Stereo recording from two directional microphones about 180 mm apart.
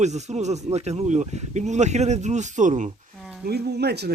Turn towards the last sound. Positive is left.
turn(degrees=-65)  # may be behind; listen again after turning